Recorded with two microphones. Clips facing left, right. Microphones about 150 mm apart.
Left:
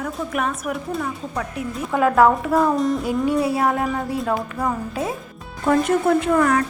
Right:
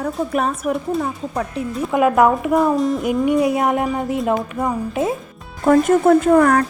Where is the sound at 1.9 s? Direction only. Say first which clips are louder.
Right 1 dB; 15° right (ahead or behind).